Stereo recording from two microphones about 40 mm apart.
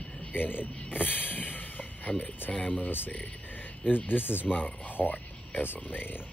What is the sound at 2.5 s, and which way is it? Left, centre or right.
Speech, left.